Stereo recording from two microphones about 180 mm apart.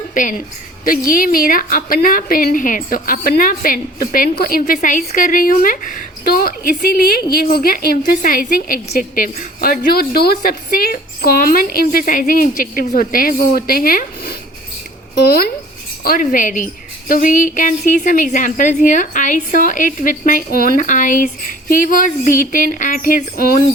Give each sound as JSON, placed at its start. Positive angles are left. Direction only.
{"t": 0.1, "sound": "a woman's voice", "side_deg": 45}
{"t": 16.0, "sound": "a woman's voice", "side_deg": 50}